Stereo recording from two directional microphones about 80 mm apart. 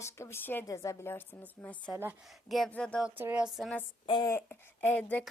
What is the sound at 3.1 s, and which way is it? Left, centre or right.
Speech, right.